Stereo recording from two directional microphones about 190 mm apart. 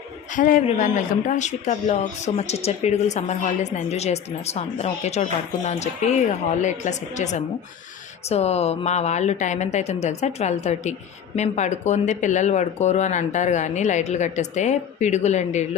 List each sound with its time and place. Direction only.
0.3 s a man's voice: 45° left (ahead or behind)